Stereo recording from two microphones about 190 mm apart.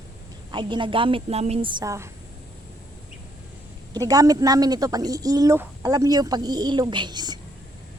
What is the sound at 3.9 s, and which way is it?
A woman's voice, 20° right (ahead or behind).